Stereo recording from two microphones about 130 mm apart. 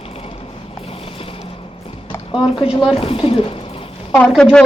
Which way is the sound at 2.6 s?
5° right (ahead or behind).